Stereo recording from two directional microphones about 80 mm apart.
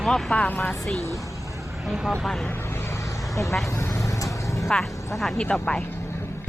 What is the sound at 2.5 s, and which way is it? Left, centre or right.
Vehicle, left.